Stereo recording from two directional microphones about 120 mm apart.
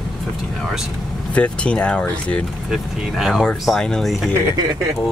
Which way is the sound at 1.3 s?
10° left (ahead or behind).